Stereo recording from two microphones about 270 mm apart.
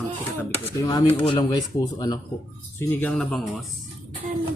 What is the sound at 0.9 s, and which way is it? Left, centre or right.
Speech, centre.